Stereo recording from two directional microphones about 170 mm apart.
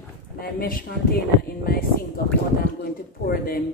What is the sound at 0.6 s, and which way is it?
Speech, 60° left (ahead or behind).